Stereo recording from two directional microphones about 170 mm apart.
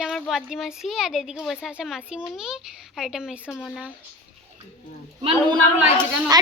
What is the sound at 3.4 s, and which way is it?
Speech, 10° left (ahead or behind).